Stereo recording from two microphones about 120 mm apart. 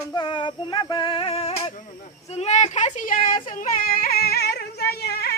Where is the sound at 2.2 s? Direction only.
65° left (ahead or behind); by 3.7 s 90° left.